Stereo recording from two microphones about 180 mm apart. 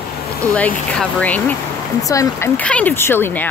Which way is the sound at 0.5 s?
5° left (ahead or behind).